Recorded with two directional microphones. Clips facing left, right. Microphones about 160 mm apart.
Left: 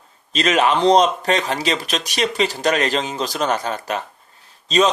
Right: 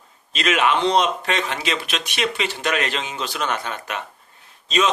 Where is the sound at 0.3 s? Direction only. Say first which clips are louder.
Left 3 dB; 35° left (ahead or behind).